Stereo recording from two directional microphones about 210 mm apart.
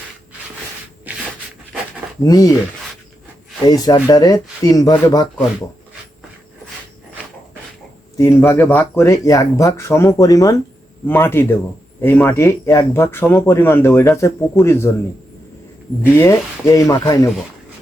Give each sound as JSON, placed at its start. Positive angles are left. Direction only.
{"t": 1.1, "sound": "a sound", "side_deg": -5}
{"t": 2.2, "sound": "speech", "side_deg": 15}
{"t": 3.7, "sound": "speech", "side_deg": 20}
{"t": 8.2, "sound": "speech", "side_deg": 10}
{"t": 16.1, "sound": "speech", "side_deg": 15}